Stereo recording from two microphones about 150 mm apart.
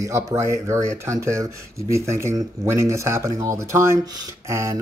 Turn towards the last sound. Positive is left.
turn(degrees=-20)  # may be behind; listen again after turning